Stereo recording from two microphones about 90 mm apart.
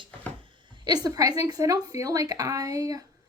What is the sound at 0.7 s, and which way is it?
A woman's voice, 50° right (ahead or behind).